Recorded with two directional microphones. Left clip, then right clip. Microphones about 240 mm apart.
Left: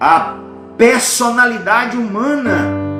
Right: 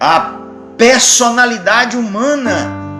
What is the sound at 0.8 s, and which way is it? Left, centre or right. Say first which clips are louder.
Music: right 3 dB; right.